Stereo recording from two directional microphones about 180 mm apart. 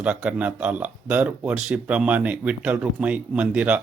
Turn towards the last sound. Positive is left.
turn(degrees=-5)  # may be behind; listen again after turning